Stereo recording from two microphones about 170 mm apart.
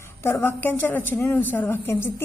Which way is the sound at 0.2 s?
15° left (ahead or behind).